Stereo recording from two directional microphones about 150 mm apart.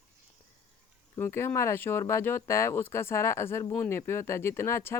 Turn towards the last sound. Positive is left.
turn(degrees=15)  # may be behind; listen again after turning